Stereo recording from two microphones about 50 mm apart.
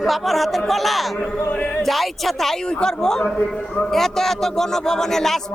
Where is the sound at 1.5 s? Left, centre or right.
Left.